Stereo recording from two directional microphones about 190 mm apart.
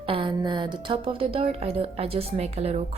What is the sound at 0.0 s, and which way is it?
A woman's voice, 30° right (ahead or behind).